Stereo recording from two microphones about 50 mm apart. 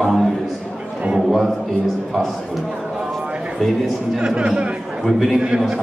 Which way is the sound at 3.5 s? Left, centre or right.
Centre.